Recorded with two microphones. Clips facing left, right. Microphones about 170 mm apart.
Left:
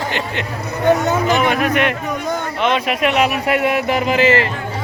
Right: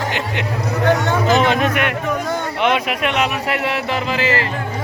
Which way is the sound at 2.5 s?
15° right (ahead or behind).